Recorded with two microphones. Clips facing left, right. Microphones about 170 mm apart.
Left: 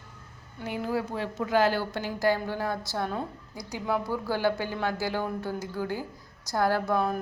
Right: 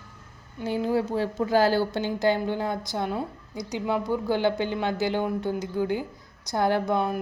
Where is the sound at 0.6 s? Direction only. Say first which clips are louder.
Right 5 dB; 30° right (ahead or behind).